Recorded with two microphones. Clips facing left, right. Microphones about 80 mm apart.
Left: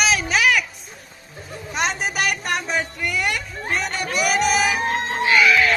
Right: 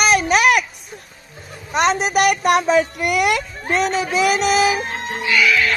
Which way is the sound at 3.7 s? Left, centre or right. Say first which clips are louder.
Right 6 dB; right.